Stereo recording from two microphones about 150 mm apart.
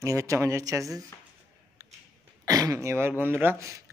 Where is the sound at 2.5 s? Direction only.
20° right (ahead or behind).